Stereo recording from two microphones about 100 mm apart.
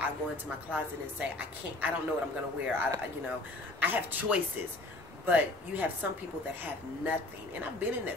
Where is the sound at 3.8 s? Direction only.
20° right (ahead or behind).